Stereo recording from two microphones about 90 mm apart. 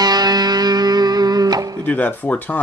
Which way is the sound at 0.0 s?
50° right (ahead or behind).